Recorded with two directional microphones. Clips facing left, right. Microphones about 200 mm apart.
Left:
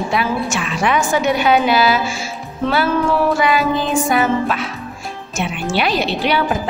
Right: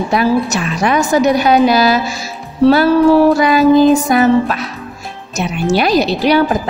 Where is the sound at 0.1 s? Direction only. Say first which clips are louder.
Right 8 dB; 40° right (ahead or behind).